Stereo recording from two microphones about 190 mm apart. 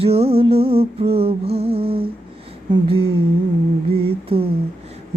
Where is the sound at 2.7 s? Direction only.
30° right (ahead or behind).